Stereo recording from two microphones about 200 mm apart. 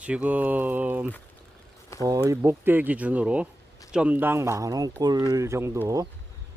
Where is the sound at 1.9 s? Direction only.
15° left (ahead or behind).